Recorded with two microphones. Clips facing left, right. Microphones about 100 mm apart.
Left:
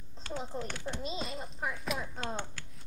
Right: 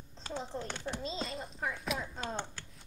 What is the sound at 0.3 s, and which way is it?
Speech, 5° left (ahead or behind).